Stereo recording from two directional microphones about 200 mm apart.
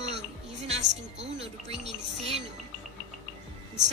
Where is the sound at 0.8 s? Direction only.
60° right (ahead or behind).